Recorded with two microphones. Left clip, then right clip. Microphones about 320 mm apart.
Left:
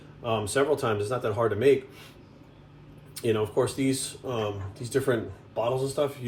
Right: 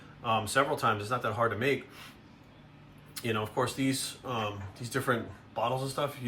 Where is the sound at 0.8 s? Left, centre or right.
Right.